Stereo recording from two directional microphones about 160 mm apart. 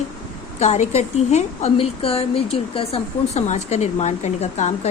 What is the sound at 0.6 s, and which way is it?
A woman's voice, 45° left (ahead or behind).